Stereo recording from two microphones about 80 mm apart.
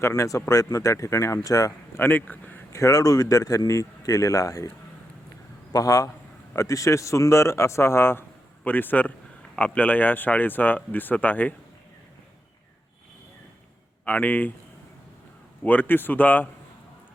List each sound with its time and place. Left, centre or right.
0.1 s speech: left
2.0 s speech: left
2.7 s speech: left
5.7 s speech: left; by 11.5 s centre
14.0 s speech: left
15.6 s speech: left